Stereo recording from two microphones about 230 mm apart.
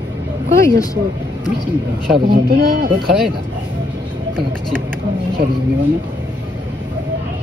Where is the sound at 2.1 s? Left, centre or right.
Right.